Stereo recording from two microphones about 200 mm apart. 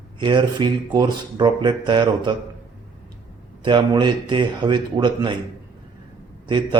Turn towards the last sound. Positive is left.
turn(degrees=-25)  # may be behind; listen again after turning